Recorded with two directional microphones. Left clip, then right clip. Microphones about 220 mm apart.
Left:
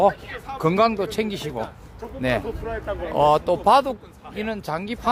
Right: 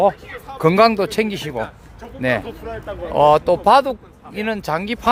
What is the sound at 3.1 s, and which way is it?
Speech, 25° right (ahead or behind).